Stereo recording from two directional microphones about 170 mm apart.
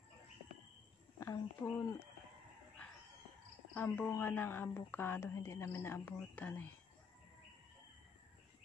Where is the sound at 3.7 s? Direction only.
10° left (ahead or behind).